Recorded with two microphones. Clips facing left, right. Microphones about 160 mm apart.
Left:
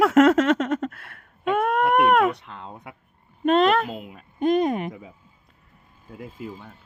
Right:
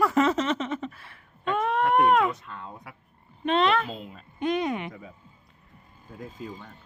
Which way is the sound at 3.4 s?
45° left (ahead or behind).